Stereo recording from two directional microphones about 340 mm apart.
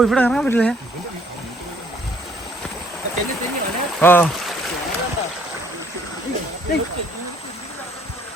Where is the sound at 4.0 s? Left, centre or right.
Centre.